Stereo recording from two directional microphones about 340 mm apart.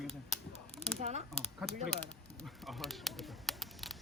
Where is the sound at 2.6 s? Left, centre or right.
Centre.